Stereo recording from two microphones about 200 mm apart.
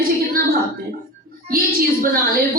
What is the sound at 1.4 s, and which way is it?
Speech, 45° right (ahead or behind).